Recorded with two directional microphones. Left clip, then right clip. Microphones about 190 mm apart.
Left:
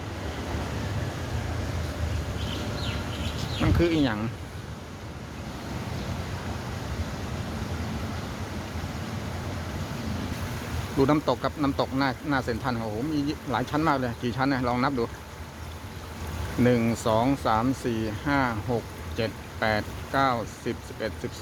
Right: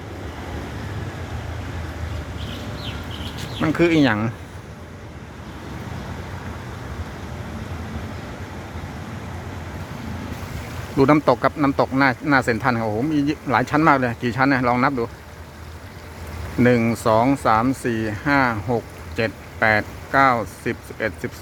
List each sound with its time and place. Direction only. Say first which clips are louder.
3.6 s speech: right 7 dB; 25° right (ahead or behind)
10.9 s speech: right 8 dB; 25° right (ahead or behind)
16.6 s speech: right 6 dB; 15° right (ahead or behind)